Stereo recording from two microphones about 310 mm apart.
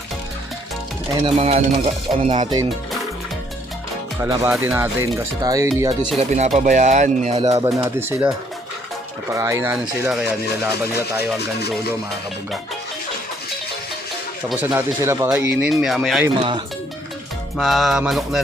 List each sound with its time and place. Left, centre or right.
1.2 s speech: centre
4.2 s speech: centre
6.1 s speech: right
9.3 s speech: centre
14.5 s speech: centre
16.4 s speech: centre
17.6 s speech: centre